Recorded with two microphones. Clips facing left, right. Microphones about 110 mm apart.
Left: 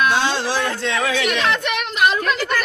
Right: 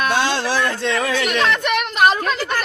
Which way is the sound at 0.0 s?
55° right (ahead or behind).